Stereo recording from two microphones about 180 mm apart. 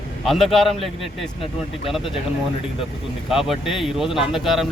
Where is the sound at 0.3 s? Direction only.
Centre (ahead or behind).